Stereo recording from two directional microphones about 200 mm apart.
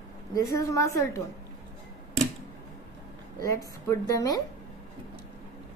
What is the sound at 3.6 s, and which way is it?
Speech, 15° left (ahead or behind).